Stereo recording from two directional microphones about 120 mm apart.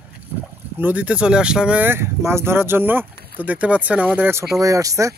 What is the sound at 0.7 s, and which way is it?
Speech, 15° right (ahead or behind).